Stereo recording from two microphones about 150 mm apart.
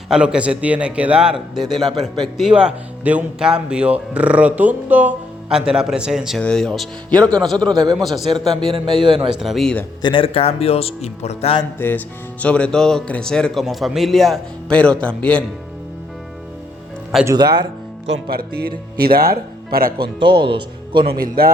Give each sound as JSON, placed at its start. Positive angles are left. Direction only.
{"t": 0.1, "sound": "a man's voice", "side_deg": -5}
{"t": 7.7, "sound": "speech", "side_deg": -25}
{"t": 7.9, "sound": "speech", "side_deg": 0}
{"t": 8.7, "sound": "a man's voice", "side_deg": -35}
{"t": 9.3, "sound": "speech", "side_deg": 0}
{"t": 10.0, "sound": "speech", "side_deg": 35}
{"t": 11.8, "sound": "speech", "side_deg": 10}
{"t": 17.2, "sound": "speech", "side_deg": -30}
{"t": 18.3, "sound": "speech", "side_deg": -90}
{"t": 20.2, "sound": "speech", "side_deg": -30}
{"t": 21.2, "sound": "a man's voice", "side_deg": -80}